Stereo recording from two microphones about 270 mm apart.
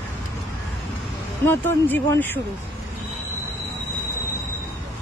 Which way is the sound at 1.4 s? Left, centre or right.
Centre.